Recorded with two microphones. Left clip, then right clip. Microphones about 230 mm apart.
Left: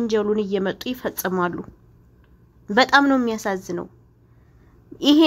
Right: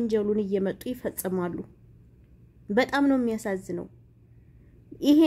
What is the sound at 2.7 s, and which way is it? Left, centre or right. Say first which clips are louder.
Speech: left 8 dB; centre.